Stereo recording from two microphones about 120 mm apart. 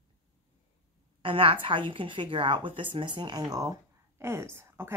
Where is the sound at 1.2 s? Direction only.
45° right (ahead or behind).